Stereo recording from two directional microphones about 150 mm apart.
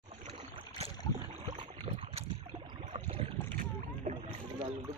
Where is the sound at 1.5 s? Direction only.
30° right (ahead or behind).